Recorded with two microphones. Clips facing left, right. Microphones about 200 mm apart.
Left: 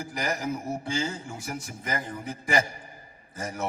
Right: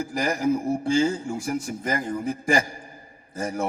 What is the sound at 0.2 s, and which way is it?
A man's voice, 30° right (ahead or behind).